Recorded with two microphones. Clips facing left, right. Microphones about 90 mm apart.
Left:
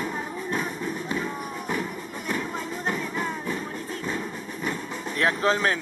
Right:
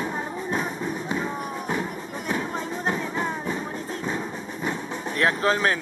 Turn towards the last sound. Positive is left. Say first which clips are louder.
# right 1 dB
turn(degrees=-5)  # may be behind; listen again after turning